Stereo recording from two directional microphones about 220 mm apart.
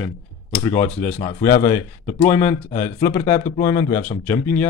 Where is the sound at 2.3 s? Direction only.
10° left (ahead or behind).